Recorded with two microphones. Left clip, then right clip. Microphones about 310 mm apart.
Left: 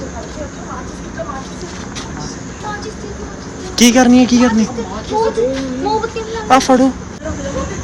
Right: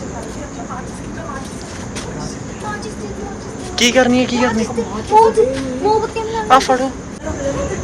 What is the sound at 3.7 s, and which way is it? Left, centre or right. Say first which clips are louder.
Speech: left 2 dB; centre.